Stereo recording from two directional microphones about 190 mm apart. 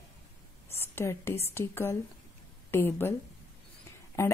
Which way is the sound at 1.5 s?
10° left (ahead or behind).